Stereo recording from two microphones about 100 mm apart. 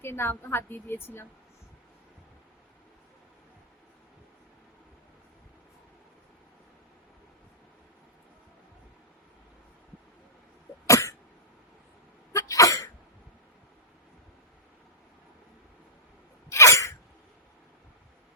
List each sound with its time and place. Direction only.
0.0 s a woman's voice: 25° left (ahead or behind)
10.8 s cough: 30° left (ahead or behind)
12.3 s cough: 30° left (ahead or behind)
16.5 s sneeze: 30° left (ahead or behind)